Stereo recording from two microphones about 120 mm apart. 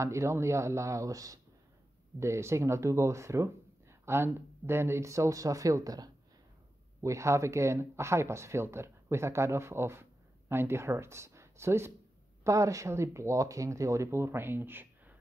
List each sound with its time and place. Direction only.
0.0 s speech: 25° right (ahead or behind)